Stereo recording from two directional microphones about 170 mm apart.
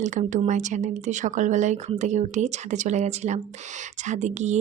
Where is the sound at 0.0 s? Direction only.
45° right (ahead or behind).